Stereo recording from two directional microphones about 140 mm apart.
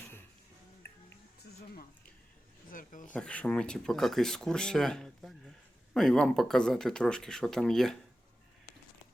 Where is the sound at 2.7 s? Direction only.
75° left (ahead or behind).